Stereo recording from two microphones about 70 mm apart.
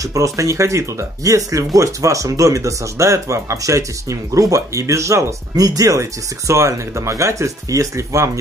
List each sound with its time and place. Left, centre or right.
0.1 s speech: right